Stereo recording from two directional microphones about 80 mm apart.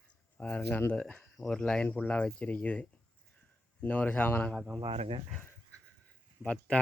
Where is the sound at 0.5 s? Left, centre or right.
Left.